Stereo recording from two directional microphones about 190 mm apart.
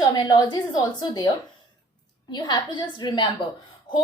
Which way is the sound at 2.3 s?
25° left (ahead or behind).